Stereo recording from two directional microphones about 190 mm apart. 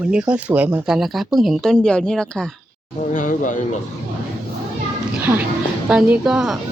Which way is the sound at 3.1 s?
40° left (ahead or behind).